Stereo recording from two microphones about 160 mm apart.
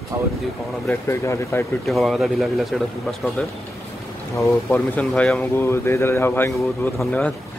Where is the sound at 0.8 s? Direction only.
20° left (ahead or behind).